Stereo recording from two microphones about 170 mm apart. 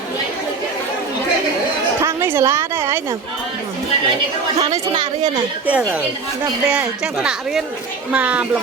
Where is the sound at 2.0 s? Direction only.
15° right (ahead or behind).